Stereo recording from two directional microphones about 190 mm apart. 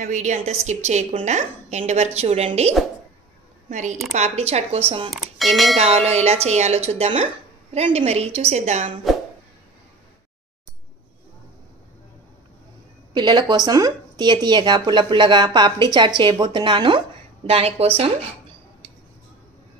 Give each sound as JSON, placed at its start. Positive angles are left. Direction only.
{"t": 0.0, "sound": "a woman's voice", "side_deg": -40}
{"t": 5.1, "sound": "speech", "side_deg": 0}
{"t": 5.8, "sound": "a woman's voice", "side_deg": -35}
{"t": 13.1, "sound": "a woman's voice", "side_deg": -25}